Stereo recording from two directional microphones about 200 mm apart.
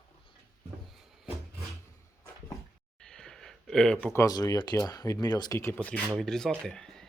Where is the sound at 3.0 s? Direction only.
5° left (ahead or behind).